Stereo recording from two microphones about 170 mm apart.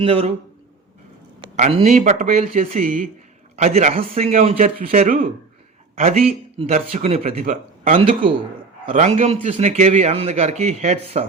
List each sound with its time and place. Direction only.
0.0 s a man's voice: 35° right (ahead or behind)
1.5 s a man's voice: 40° right (ahead or behind)